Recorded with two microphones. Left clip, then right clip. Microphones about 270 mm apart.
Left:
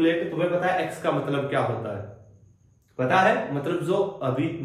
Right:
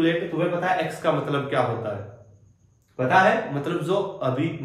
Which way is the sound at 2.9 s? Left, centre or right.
Centre.